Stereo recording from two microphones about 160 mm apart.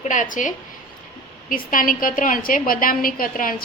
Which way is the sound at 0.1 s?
55° left (ahead or behind).